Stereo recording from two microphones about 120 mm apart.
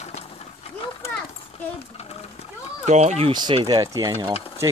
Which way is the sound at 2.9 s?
65° right (ahead or behind).